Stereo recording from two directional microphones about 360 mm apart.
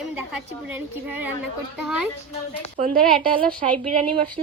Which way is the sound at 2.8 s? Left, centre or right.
Right.